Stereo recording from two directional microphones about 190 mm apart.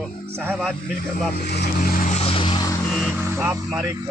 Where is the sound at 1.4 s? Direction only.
55° left (ahead or behind); by 2.7 s 25° left (ahead or behind).